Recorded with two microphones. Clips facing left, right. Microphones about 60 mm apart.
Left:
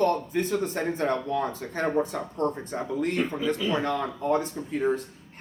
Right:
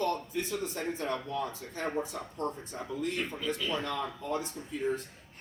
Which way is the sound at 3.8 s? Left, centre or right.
Left.